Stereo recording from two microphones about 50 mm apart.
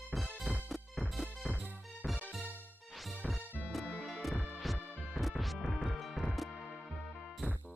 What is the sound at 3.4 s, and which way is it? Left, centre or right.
Music, left.